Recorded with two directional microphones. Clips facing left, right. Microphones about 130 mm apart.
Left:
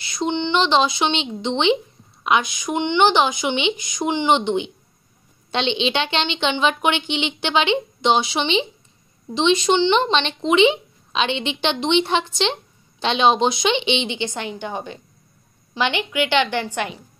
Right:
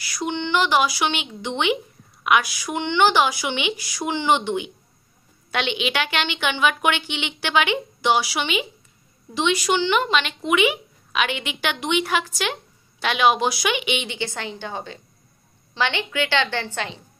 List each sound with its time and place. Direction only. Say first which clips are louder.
0.0 s a woman's voice: left 4 dB; 25° left (ahead or behind)